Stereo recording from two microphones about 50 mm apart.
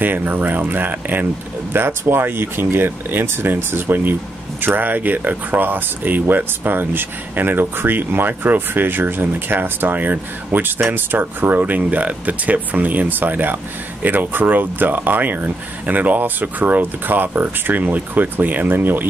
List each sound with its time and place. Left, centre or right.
0.0 s speech: right